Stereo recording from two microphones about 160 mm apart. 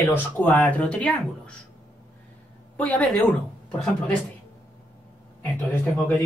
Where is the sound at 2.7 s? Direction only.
10° left (ahead or behind).